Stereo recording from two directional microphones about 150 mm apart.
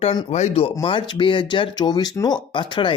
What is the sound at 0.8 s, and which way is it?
Speech, 35° left (ahead or behind).